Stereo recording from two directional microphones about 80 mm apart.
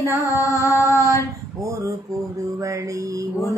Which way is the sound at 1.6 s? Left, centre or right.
Right.